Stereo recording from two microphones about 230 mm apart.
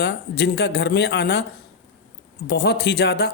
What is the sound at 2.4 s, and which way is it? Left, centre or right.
Speech, left.